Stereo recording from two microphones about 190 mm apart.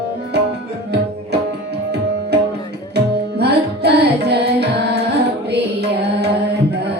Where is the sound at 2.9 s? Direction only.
60° right (ahead or behind).